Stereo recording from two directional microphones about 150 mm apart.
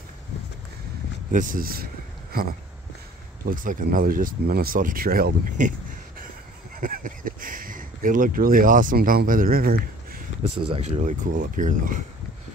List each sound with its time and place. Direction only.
1.3 s speech: 60° right (ahead or behind)
3.4 s speech: 65° right (ahead or behind)
6.8 s speech: 65° right (ahead or behind)
10.4 s speech: 45° right (ahead or behind); by 12.0 s 65° right (ahead or behind)